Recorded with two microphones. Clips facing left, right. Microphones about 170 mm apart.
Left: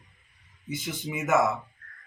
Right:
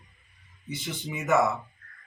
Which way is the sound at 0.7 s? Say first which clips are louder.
Left 2 dB; 5° left (ahead or behind).